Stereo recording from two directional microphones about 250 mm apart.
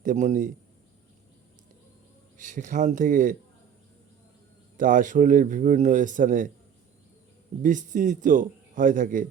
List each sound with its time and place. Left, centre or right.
0.0 s a man's voice: right
2.4 s a man's voice: right
4.8 s a man's voice: right
7.6 s a man's voice: right